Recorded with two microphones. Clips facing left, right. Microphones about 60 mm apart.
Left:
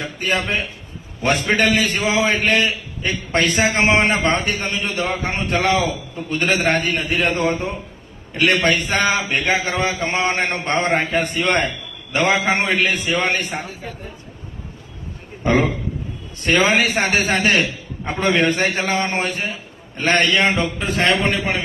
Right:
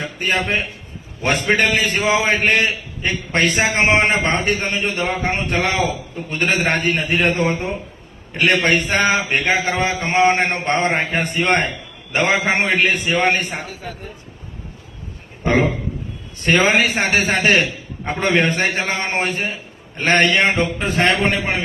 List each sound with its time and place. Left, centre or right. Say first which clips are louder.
0.2 s a man's voice: right 1 dB; right
3.1 s a man's voice: right 1 dB; right
3.5 s a man's voice: even; right
16.6 s a man's voice: right 1 dB; right
17.2 s a man's voice: right 1 dB; right
18.0 s a man's voice: even; right